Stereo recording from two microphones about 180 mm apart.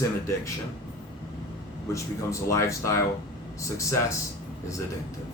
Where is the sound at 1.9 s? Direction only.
15° left (ahead or behind).